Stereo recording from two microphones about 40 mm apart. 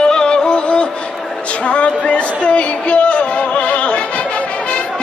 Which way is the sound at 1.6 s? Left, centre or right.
Left.